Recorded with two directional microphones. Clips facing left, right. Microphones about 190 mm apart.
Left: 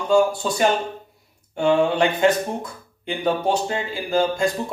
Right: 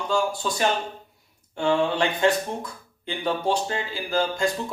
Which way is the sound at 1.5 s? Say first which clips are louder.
Left 4 dB; 20° left (ahead or behind).